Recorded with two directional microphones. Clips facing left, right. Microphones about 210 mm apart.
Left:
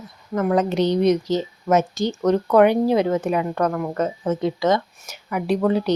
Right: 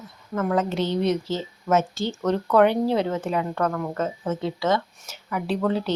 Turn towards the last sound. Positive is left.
turn(degrees=15)  # may be behind; listen again after turning